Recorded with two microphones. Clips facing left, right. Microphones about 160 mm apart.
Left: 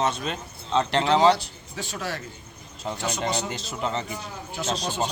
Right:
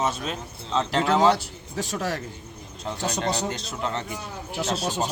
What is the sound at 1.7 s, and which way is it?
Speech, 40° right (ahead or behind).